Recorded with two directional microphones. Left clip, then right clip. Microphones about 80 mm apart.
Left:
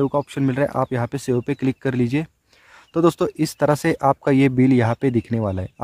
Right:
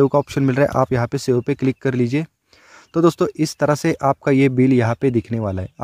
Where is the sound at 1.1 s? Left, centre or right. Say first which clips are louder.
Right 3 dB; right.